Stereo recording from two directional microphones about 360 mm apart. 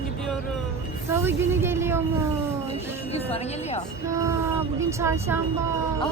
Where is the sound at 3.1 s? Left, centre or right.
Centre.